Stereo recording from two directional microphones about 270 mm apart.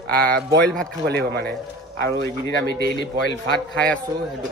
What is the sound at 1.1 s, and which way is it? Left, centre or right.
A man's voice, right.